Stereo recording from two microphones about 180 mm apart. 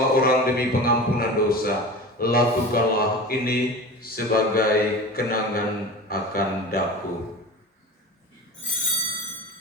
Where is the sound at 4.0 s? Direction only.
55° left (ahead or behind).